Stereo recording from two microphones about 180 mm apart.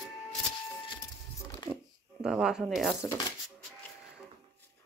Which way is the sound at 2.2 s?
5° right (ahead or behind).